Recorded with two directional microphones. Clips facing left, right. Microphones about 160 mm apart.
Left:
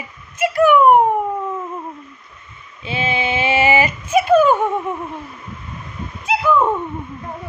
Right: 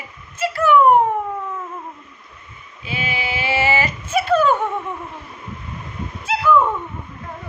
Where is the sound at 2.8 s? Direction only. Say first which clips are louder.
Left 5 dB; 25° left (ahead or behind).